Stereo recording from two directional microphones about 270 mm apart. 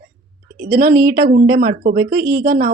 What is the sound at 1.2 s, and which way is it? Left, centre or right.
Speech, right.